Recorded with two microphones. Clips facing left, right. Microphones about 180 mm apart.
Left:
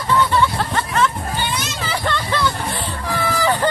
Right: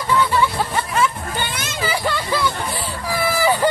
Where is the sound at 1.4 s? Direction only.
55° right (ahead or behind).